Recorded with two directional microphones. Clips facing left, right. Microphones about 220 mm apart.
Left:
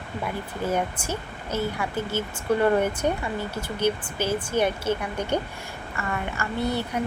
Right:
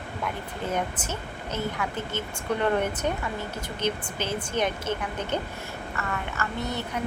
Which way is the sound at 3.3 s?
10° left (ahead or behind).